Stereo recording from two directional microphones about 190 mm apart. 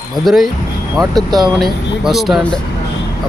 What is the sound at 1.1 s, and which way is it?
Speech, 20° right (ahead or behind).